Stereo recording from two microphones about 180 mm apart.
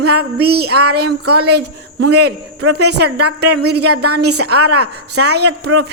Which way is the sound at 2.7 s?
65° right (ahead or behind).